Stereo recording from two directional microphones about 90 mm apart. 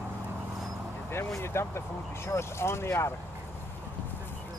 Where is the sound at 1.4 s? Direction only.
30° left (ahead or behind).